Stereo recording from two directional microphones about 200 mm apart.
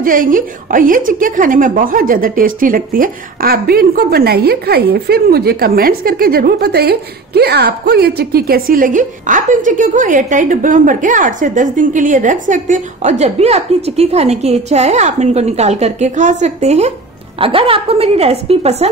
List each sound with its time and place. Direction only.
0.0 s a woman's voice: 45° right (ahead or behind)